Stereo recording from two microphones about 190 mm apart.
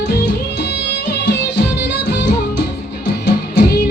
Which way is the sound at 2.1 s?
60° left (ahead or behind).